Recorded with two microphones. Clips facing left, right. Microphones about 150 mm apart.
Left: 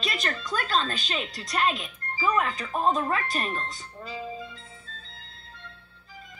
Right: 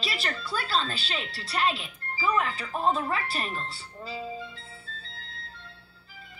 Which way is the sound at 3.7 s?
30° right (ahead or behind).